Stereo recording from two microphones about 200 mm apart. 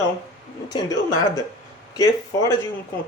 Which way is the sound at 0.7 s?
20° left (ahead or behind).